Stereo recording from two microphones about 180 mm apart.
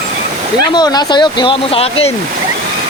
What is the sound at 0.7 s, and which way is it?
Speech, 25° left (ahead or behind).